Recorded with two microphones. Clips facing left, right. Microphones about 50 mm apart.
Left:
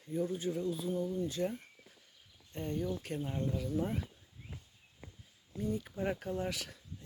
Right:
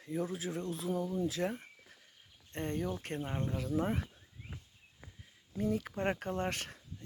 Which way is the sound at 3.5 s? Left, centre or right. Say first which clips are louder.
Right 4 dB; right.